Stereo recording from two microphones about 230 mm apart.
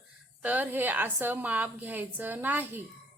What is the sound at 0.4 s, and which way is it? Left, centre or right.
A woman's voice, centre.